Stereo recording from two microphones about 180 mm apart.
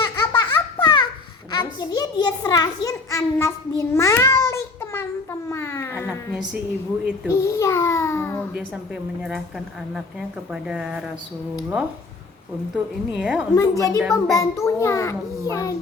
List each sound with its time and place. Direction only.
0.2 s baby laughter: 25° left (ahead or behind)
1.5 s a sound: 25° left (ahead or behind)
7.3 s a child's voice: 15° left (ahead or behind)
9.9 s a woman's voice: 5° right (ahead or behind)
13.6 s a woman's voice: 20° left (ahead or behind)
14.0 s a woman's voice: centre (ahead or behind)
14.3 s a child's voice: 15° left (ahead or behind)